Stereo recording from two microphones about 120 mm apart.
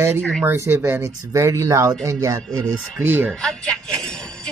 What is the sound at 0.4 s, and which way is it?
Speech, 20° right (ahead or behind).